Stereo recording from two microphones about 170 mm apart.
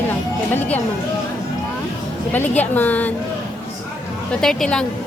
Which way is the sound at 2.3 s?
10° left (ahead or behind).